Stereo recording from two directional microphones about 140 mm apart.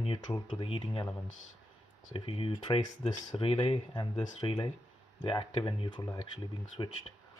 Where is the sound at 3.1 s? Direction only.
30° left (ahead or behind).